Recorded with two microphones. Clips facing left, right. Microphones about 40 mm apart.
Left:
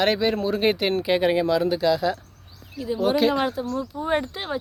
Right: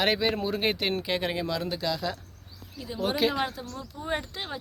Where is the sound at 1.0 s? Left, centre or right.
Centre.